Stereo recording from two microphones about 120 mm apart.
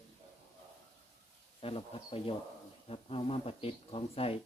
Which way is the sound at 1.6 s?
50° left (ahead or behind).